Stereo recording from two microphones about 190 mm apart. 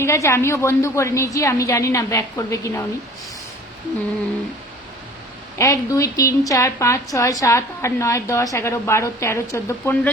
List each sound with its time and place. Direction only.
0.0 s a woman's voice: 15° left (ahead or behind)
5.5 s a woman's voice: 15° left (ahead or behind)